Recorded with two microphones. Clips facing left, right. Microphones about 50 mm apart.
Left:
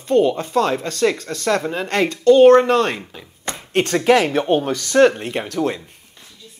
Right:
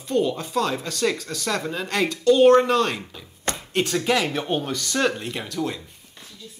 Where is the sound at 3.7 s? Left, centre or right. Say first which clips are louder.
Left 7 dB; left.